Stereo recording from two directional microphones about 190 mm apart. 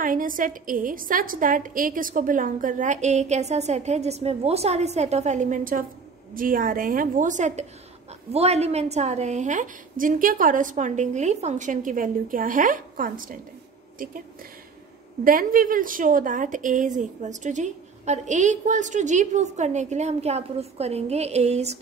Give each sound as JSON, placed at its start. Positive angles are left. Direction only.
{"t": 0.0, "sound": "a woman's voice", "side_deg": -45}
{"t": 15.2, "sound": "a woman's voice", "side_deg": -45}